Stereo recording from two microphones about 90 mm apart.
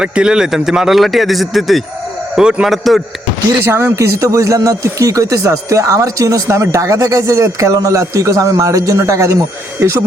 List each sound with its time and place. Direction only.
0.0 s speech: 10° right (ahead or behind)
3.6 s a man's voice: 30° right (ahead or behind)